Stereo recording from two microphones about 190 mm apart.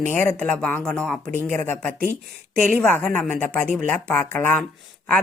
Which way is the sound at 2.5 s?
50° right (ahead or behind).